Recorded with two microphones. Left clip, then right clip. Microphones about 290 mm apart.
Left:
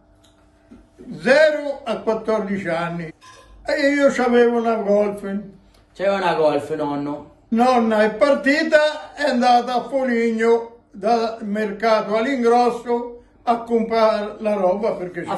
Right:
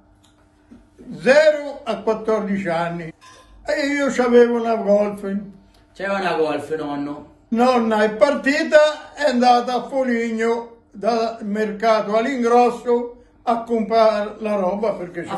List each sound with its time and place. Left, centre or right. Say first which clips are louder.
1.1 s a man's voice: right 1 dB; centre
5.9 s a man's voice: left 2 dB; centre
7.4 s a man's voice: even; centre